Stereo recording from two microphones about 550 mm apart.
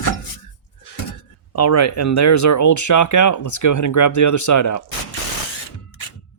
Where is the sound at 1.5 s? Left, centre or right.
Left.